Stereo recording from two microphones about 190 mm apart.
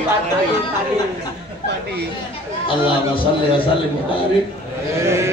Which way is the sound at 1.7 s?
60° right (ahead or behind).